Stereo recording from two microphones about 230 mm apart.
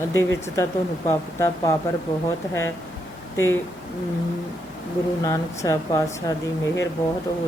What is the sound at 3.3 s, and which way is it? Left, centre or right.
Speech, centre.